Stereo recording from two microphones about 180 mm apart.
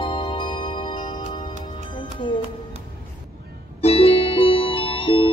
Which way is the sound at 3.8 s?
35° left (ahead or behind).